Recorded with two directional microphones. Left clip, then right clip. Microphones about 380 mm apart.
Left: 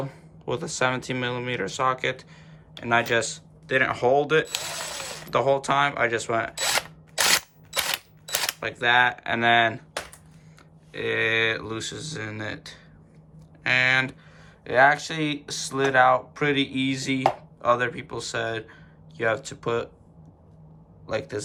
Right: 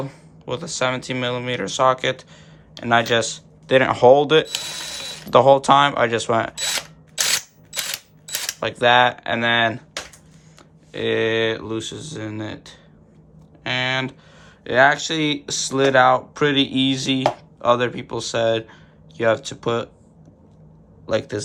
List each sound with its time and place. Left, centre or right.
0.0 s speech: centre
6.6 s a sound: centre
8.6 s speech: centre
10.9 s speech: centre
21.1 s speech: centre